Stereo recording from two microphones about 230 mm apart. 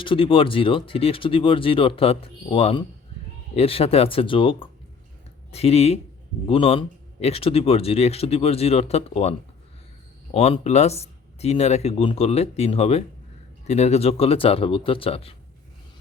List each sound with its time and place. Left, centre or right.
0.0 s speech: left
10.3 s speech: left